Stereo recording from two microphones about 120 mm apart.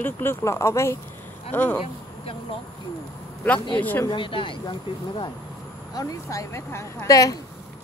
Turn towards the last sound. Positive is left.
turn(degrees=30)  # may be behind; listen again after turning